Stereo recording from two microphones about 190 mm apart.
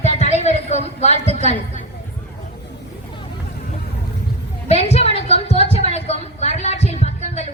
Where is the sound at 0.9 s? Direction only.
35° left (ahead or behind).